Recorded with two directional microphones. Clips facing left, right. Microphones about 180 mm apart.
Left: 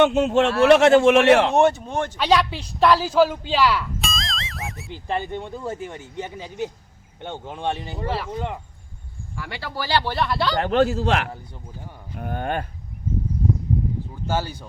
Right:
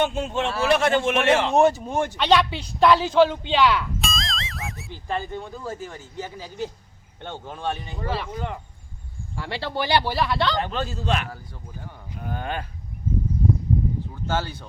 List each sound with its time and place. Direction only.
0.0 s a man's voice: 70° left (ahead or behind)
1.5 s speech: centre (ahead or behind)
2.1 s speech: 5° left (ahead or behind)
4.9 s speech: 25° left (ahead or behind)
9.3 s speech: 30° right (ahead or behind); by 10.5 s centre (ahead or behind)
10.6 s a man's voice: 75° left (ahead or behind)
12.2 s speech: 55° left (ahead or behind)
14.3 s speech: 10° left (ahead or behind)